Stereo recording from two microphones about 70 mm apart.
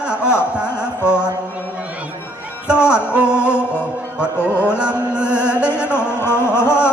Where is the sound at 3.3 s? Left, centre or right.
Left.